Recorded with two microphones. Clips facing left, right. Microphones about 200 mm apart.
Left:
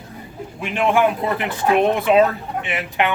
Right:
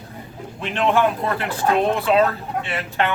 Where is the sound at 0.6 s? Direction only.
10° left (ahead or behind).